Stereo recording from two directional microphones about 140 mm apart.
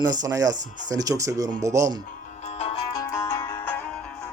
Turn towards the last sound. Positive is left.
turn(degrees=10)  # may be behind; listen again after turning